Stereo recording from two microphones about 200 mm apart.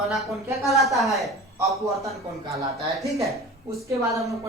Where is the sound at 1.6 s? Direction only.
15° right (ahead or behind).